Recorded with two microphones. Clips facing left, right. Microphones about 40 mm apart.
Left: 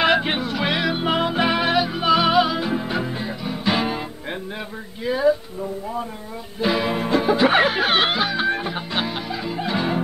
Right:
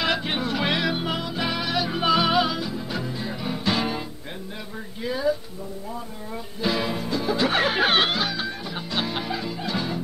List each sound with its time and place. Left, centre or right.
0.0 s music: left
0.4 s music: centre
1.0 s music: left
1.9 s music: centre
2.6 s music: left
3.3 s music: centre
5.0 s a sound: centre
6.6 s music: centre
7.0 s music: left
7.2 s music: left
7.6 s music: centre
8.1 s music: centre
8.4 s music: left
8.7 s music: left